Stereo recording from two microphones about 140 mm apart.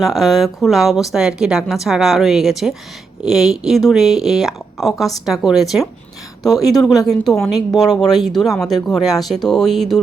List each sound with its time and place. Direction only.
0.0 s a woman's voice: centre (ahead or behind)
6.5 s speech: 25° left (ahead or behind)
6.8 s a woman's voice: centre (ahead or behind)